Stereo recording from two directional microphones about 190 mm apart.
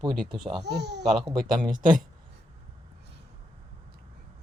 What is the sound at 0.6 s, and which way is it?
Speech, 60° right (ahead or behind).